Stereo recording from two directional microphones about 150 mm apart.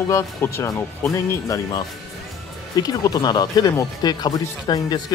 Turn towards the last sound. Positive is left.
turn(degrees=25)  # may be behind; listen again after turning